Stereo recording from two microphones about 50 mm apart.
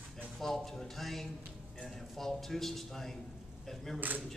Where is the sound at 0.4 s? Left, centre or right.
Centre.